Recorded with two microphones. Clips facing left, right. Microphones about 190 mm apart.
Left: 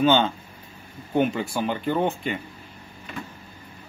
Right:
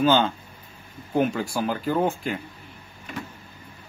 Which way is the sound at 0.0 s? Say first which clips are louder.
Even; centre (ahead or behind).